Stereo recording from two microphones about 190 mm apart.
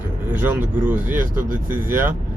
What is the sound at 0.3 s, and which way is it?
Speech, 10° right (ahead or behind).